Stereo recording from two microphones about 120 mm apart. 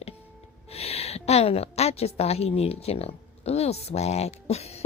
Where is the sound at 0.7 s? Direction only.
60° left (ahead or behind).